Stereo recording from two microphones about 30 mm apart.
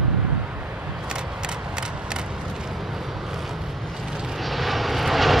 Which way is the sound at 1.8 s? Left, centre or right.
Right.